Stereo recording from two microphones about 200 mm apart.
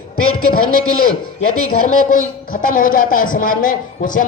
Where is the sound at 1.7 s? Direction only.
40° left (ahead or behind).